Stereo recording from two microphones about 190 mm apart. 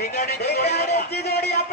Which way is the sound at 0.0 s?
60° left (ahead or behind).